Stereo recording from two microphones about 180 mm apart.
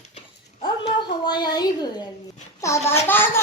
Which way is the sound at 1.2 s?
25° left (ahead or behind).